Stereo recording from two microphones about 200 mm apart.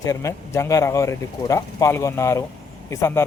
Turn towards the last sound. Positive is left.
turn(degrees=15)  # may be behind; listen again after turning